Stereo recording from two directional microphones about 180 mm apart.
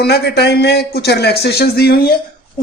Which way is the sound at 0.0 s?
65° left (ahead or behind).